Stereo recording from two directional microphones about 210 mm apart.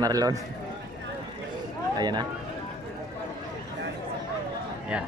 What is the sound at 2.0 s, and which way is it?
Speech, 20° right (ahead or behind).